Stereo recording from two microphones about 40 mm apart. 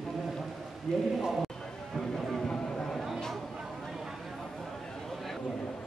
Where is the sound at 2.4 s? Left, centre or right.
Centre.